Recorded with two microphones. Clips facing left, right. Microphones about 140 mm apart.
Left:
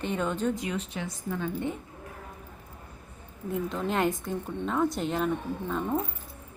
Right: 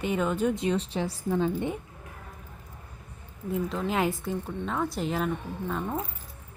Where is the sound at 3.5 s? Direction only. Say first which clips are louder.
Right 1 dB; centre (ahead or behind).